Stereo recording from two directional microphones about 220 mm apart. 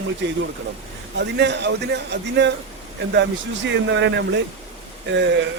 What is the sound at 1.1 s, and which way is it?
A man's voice, 50° right (ahead or behind).